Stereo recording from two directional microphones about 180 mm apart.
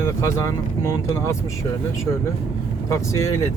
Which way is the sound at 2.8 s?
15° left (ahead or behind).